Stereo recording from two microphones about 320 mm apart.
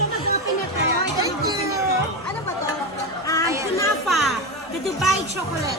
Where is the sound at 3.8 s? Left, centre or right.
Centre.